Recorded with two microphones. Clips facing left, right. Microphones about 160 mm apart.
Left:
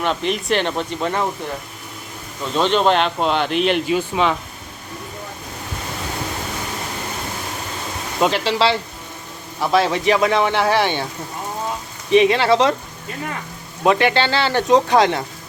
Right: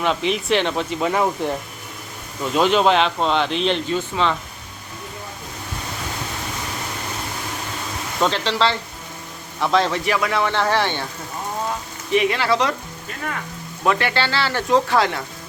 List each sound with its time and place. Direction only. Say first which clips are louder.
0.0 s speech: even; centre (ahead or behind)
2.6 s speech: even; 5° right (ahead or behind); by 4.4 s 15° left (ahead or behind)
8.2 s speech: left 2 dB; 10° left (ahead or behind)
10.1 s speech: left 4 dB; 25° left (ahead or behind)
12.1 s speech: left 5 dB; 25° left (ahead or behind)
13.8 s speech: left 4 dB; 20° left (ahead or behind)